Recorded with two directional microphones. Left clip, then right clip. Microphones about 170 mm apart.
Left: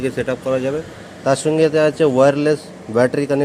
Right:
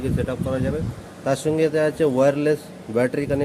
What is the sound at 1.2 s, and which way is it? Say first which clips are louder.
A man's voice: left 5 dB; 15° left (ahead or behind).